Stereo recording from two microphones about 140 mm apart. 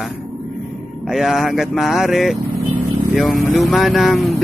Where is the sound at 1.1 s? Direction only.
Centre (ahead or behind).